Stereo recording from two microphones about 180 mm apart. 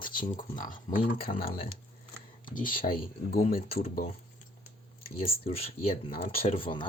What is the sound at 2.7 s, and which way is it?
Speech, 50° left (ahead or behind).